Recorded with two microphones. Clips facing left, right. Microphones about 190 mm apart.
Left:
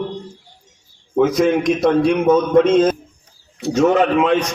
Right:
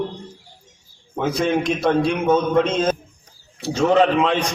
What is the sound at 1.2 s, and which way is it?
Speech, 30° right (ahead or behind).